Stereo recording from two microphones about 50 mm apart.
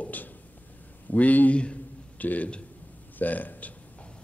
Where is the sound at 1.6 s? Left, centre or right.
Left.